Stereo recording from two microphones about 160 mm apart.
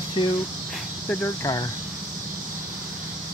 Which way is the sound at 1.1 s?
10° left (ahead or behind).